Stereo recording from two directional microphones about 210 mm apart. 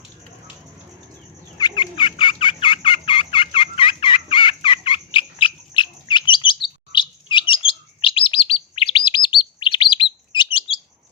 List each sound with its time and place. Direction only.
1.5 s fowl: 20° left (ahead or behind)
6.9 s chirp: 20° left (ahead or behind)